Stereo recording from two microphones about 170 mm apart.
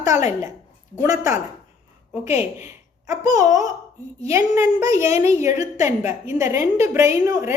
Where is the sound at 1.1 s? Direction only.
45° left (ahead or behind).